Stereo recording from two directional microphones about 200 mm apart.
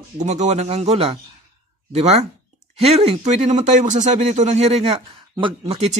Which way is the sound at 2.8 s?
30° right (ahead or behind).